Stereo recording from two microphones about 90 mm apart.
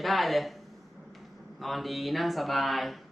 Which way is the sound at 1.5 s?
Centre (ahead or behind).